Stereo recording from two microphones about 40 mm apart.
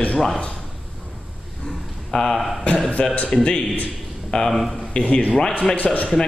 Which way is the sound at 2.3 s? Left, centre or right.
Centre.